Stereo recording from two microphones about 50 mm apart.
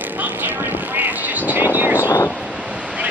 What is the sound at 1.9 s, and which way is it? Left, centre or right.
Vehicle, left.